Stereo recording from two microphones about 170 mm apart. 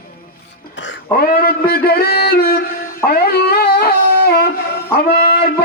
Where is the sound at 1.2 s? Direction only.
60° left (ahead or behind).